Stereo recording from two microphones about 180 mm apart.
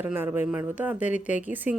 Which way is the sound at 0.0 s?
10° right (ahead or behind).